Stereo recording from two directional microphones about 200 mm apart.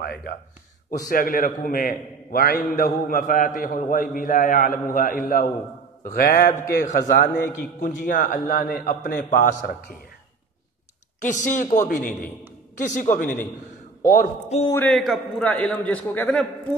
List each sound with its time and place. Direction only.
0.0 s a man's voice: 55° left (ahead or behind)
11.1 s speech: 40° left (ahead or behind)
14.7 s a man's voice: 5° left (ahead or behind)